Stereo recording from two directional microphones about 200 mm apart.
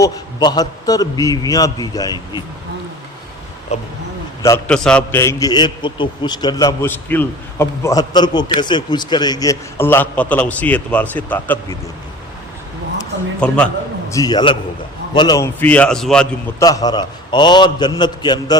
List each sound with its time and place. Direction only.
0.0 s a man's voice: 20° left (ahead or behind)
3.7 s speech: 35° left (ahead or behind)
4.7 s a man's voice: 5° left (ahead or behind)
13.4 s a man's voice: 5° left (ahead or behind)
14.1 s a man's voice: 20° left (ahead or behind)
15.6 s a man's voice: 5° left (ahead or behind)
16.6 s a man's voice: 20° left (ahead or behind)